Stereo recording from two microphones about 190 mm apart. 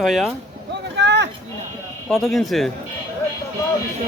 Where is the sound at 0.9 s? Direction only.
65° right (ahead or behind).